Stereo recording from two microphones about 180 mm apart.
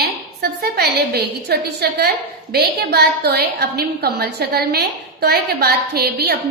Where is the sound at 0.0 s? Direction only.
60° right (ahead or behind).